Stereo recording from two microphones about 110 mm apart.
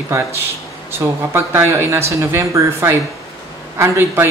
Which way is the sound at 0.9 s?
25° right (ahead or behind).